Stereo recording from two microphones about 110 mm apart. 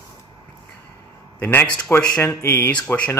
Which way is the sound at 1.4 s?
15° left (ahead or behind).